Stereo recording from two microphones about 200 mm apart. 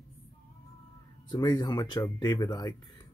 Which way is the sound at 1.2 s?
20° left (ahead or behind).